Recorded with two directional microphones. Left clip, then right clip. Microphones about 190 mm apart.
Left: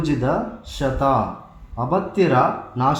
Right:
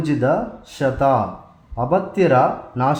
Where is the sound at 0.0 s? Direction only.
35° right (ahead or behind).